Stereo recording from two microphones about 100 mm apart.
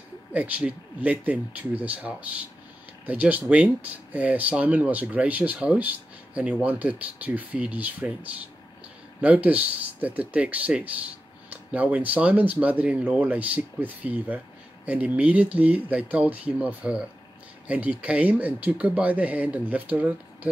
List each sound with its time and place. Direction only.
0.3 s speech: 15° right (ahead or behind)